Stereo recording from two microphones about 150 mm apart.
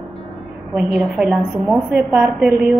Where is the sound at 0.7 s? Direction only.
Centre (ahead or behind).